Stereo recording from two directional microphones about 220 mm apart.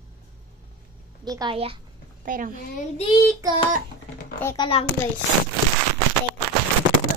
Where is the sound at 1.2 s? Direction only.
20° right (ahead or behind).